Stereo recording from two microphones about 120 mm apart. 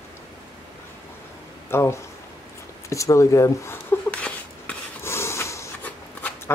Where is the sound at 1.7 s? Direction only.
20° left (ahead or behind).